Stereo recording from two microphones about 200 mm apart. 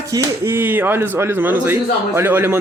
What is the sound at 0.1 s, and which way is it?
A man's voice, 15° right (ahead or behind).